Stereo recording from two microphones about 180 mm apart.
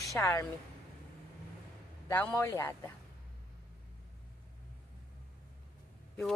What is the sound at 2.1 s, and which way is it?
Speech, 10° left (ahead or behind).